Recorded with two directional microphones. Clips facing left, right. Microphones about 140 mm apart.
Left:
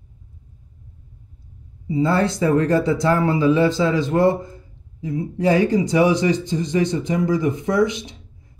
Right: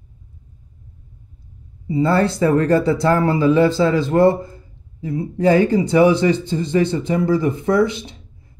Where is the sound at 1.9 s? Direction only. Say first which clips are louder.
Right 2 dB; 55° right (ahead or behind).